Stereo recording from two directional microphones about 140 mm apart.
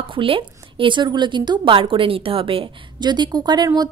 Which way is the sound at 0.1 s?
40° right (ahead or behind).